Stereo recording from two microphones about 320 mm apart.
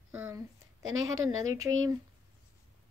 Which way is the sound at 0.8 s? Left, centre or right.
Right.